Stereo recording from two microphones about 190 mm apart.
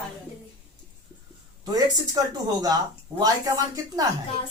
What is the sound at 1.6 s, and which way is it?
Speech, 20° right (ahead or behind).